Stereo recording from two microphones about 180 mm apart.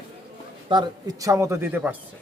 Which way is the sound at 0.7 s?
20° right (ahead or behind).